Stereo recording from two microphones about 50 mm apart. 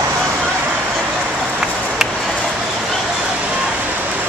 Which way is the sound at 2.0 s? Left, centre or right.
Centre.